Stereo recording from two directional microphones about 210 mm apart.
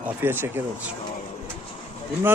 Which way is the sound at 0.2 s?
10° right (ahead or behind).